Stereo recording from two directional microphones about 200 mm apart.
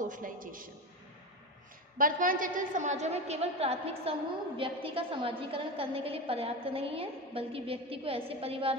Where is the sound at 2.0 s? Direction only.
40° right (ahead or behind).